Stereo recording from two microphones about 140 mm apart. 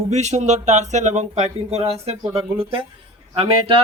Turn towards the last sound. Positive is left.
turn(degrees=-40)  # may be behind; listen again after turning